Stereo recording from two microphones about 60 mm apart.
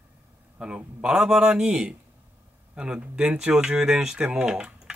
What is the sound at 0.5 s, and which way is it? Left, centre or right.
Speech, centre.